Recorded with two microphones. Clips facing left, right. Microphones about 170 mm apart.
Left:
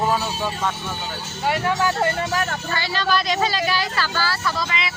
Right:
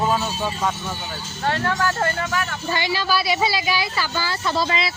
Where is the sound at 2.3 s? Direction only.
40° left (ahead or behind).